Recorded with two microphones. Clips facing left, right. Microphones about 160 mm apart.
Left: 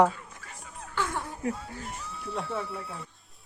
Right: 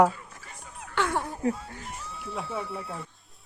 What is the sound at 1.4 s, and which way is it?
Speech, 35° right (ahead or behind).